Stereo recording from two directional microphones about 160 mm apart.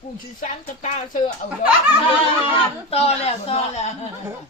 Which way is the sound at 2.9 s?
40° left (ahead or behind).